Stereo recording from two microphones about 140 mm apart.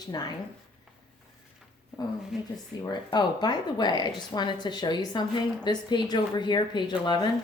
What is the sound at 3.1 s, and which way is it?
A woman's voice, 30° left (ahead or behind).